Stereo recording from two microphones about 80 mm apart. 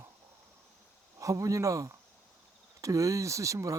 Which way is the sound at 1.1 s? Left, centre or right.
Right.